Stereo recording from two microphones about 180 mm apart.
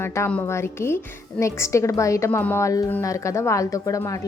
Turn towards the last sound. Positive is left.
turn(degrees=20)  # may be behind; listen again after turning